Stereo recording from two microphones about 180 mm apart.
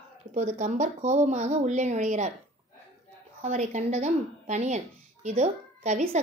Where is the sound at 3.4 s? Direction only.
40° right (ahead or behind).